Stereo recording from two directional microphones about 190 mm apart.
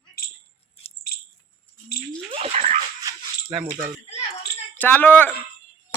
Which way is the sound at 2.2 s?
30° right (ahead or behind).